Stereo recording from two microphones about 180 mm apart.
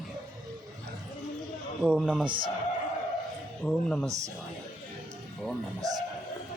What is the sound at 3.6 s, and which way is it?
Speech, 5° left (ahead or behind).